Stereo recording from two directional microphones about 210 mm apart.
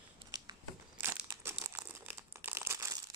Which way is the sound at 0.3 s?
20° right (ahead or behind).